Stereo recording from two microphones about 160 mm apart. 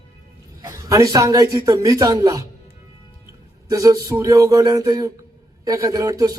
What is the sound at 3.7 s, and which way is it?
Speech, 20° right (ahead or behind).